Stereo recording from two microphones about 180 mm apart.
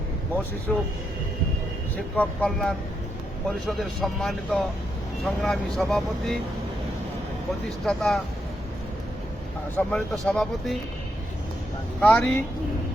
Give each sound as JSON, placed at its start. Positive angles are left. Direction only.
{"t": 0.7, "sound": "speech", "side_deg": 5}
{"t": 2.1, "sound": "speech", "side_deg": 5}
{"t": 7.9, "sound": "speech", "side_deg": 5}
{"t": 9.7, "sound": "speech", "side_deg": 5}
{"t": 11.9, "sound": "speech", "side_deg": 5}